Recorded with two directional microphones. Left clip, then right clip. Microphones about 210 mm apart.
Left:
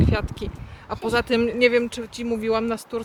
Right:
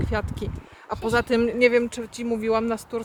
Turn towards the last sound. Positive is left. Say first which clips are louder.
# even
turn(degrees=-10)  # may be behind; listen again after turning